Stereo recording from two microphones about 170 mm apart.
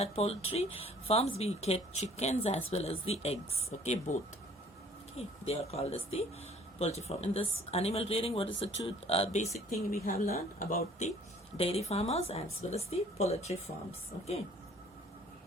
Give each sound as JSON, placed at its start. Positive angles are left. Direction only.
{"t": 0.0, "sound": "speech", "side_deg": 35}
{"t": 9.6, "sound": "speech", "side_deg": 55}
{"t": 11.5, "sound": "speech", "side_deg": 35}